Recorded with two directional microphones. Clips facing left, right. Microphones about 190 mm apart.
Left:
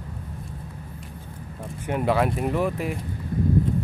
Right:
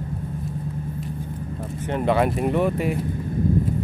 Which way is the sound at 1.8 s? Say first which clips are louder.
Right 2 dB; 10° left (ahead or behind).